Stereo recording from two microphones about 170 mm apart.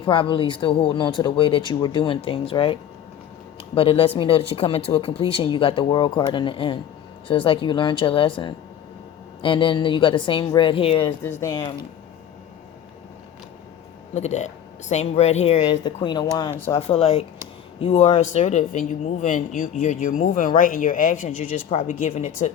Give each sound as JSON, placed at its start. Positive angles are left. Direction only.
{"t": 0.0, "sound": "speech", "side_deg": 30}
{"t": 3.8, "sound": "speech", "side_deg": 30}
{"t": 11.2, "sound": "speech", "side_deg": 15}
{"t": 14.1, "sound": "speech", "side_deg": 40}
{"t": 16.7, "sound": "speech", "side_deg": 35}